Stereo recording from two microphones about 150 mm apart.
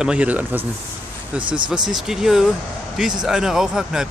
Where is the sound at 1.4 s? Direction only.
30° right (ahead or behind).